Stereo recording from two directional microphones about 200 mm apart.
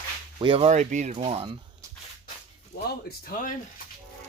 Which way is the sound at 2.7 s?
55° left (ahead or behind).